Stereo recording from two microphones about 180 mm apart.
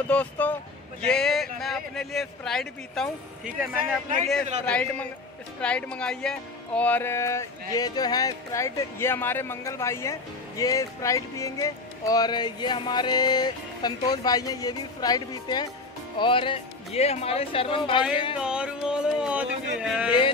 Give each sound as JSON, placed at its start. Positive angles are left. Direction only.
{"t": 0.1, "sound": "speech", "side_deg": 10}
{"t": 10.6, "sound": "music", "side_deg": 20}
{"t": 16.2, "sound": "speech", "side_deg": 30}
{"t": 18.4, "sound": "speech", "side_deg": -5}